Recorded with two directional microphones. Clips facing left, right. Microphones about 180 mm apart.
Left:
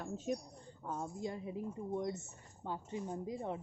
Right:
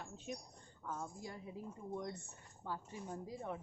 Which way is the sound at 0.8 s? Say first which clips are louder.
Left 5 dB; 25° left (ahead or behind).